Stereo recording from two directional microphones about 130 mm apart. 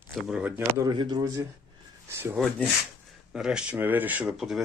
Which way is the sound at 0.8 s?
30° right (ahead or behind).